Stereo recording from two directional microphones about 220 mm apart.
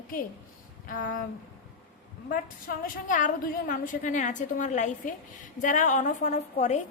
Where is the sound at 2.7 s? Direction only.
35° left (ahead or behind).